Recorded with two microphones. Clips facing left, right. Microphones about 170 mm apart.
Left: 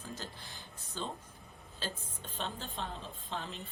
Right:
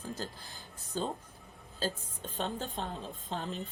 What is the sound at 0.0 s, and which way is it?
Speech, 40° right (ahead or behind).